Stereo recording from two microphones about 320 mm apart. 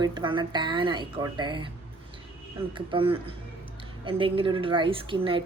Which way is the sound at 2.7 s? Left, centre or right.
Centre.